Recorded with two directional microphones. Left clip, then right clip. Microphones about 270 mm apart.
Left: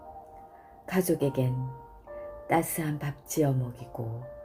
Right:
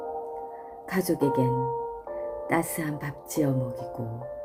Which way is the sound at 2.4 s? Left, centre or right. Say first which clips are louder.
Left 1 dB; right.